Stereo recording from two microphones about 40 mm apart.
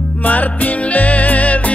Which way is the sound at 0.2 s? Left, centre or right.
Left.